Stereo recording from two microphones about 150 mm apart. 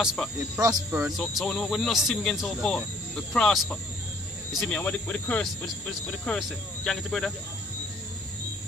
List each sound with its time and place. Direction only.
0.0 s speech: 5° right (ahead or behind)
0.6 s speech: 25° right (ahead or behind)
1.2 s speech: 5° left (ahead or behind)